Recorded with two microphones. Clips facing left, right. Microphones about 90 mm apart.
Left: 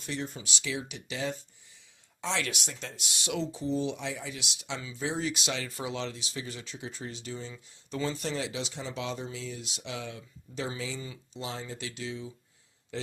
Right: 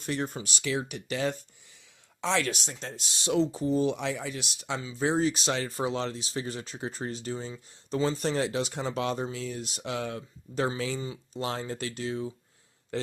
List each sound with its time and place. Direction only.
0.0 s speech: 50° right (ahead or behind)
2.4 s speech: 35° right (ahead or behind)
7.5 s speech: 30° right (ahead or behind); by 10.7 s 50° right (ahead or behind)
10.8 s speech: 60° right (ahead or behind)